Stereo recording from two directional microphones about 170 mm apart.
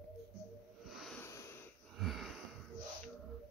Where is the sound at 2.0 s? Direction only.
Centre (ahead or behind).